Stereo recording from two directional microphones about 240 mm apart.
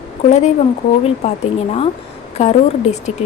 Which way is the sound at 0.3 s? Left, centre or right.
Left.